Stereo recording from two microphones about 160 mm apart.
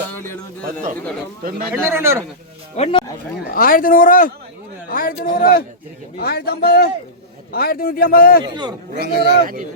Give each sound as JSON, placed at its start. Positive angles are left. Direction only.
{"t": 0.1, "sound": "a sound", "side_deg": 15}
{"t": 0.6, "sound": "a man's voice", "side_deg": -55}
{"t": 1.7, "sound": "speech", "side_deg": -15}
{"t": 2.7, "sound": "speech", "side_deg": 40}
{"t": 3.4, "sound": "a man's voice", "side_deg": 65}
{"t": 6.1, "sound": "a man's voice", "side_deg": 75}
{"t": 9.0, "sound": "speech", "side_deg": -85}